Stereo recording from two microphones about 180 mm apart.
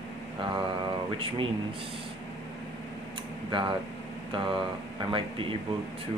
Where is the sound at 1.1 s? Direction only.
30° right (ahead or behind).